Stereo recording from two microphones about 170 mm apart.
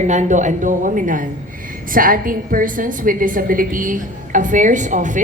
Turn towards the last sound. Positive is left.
turn(degrees=-45)  # may be behind; listen again after turning